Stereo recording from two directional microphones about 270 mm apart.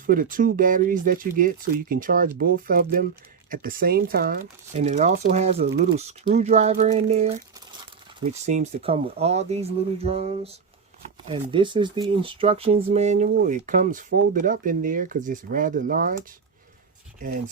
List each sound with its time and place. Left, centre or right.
0.0 s speech: right
5.6 s speech: right
6.0 s speech: right